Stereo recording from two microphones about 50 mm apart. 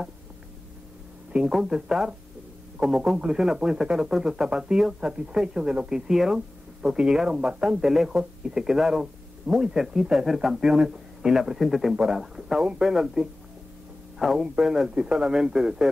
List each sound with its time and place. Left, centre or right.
1.3 s a man's voice: centre